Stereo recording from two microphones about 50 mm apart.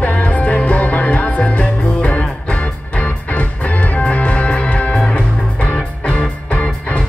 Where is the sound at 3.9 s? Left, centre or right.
Left.